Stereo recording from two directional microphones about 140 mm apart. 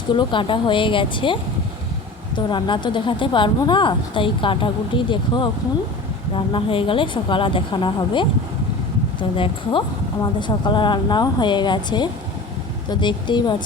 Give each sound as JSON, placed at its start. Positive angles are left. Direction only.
{"t": 0.1, "sound": "speech", "side_deg": 35}
{"t": 9.3, "sound": "speech", "side_deg": 40}